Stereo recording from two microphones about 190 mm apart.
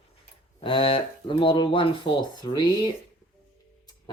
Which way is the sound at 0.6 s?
30° left (ahead or behind).